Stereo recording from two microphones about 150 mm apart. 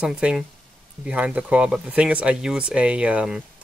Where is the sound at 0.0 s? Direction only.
5° right (ahead or behind).